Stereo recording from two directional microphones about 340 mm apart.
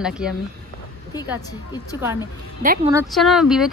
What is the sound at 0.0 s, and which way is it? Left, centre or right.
Speech, centre.